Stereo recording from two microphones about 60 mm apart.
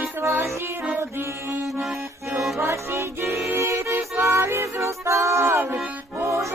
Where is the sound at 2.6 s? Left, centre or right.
Right.